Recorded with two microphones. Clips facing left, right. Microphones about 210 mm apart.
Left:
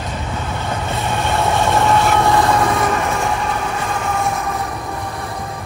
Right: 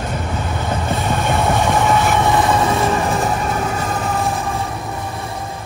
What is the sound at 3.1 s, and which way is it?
Vehicle, centre (ahead or behind).